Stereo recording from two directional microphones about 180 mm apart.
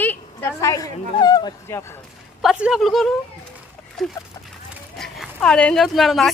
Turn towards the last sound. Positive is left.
turn(degrees=0)  # may be behind; listen again after turning